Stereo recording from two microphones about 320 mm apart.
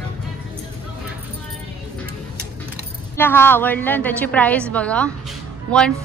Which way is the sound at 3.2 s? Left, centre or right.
Centre.